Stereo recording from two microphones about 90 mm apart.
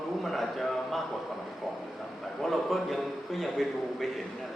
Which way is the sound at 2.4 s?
Centre (ahead or behind).